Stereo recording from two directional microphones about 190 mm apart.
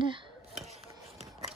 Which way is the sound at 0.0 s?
25° right (ahead or behind).